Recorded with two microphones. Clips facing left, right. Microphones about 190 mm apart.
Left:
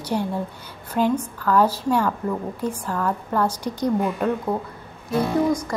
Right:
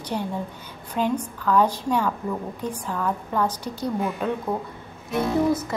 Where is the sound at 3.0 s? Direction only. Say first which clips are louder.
Left 2 dB; 10° right (ahead or behind).